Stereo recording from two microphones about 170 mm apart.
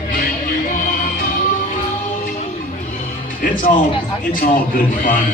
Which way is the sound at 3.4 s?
55° left (ahead or behind).